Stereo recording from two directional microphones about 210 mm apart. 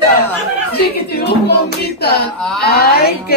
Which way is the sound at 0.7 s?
50° left (ahead or behind).